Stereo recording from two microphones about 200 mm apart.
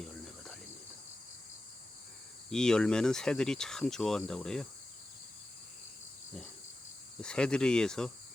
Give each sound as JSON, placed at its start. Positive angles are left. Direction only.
{"t": 2.5, "sound": "speech", "side_deg": 5}
{"t": 7.2, "sound": "speech", "side_deg": 5}